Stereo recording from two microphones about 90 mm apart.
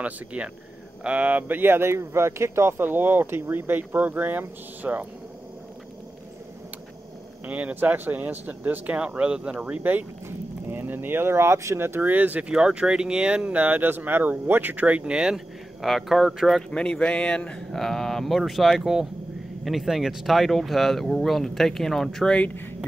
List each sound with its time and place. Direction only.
0.0 s speech: 15° right (ahead or behind)
7.4 s speech: 15° right (ahead or behind)
16.7 s speech: 10° left (ahead or behind)